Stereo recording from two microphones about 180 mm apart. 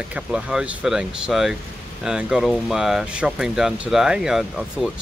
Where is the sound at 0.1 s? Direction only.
5° right (ahead or behind).